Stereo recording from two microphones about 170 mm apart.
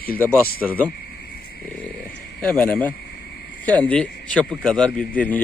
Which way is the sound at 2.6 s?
10° left (ahead or behind).